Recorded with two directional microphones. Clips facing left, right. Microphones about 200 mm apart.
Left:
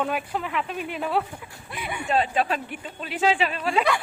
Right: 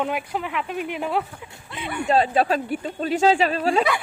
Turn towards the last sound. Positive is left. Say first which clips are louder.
# right 4 dB
turn(degrees=-40)  # may be behind; listen again after turning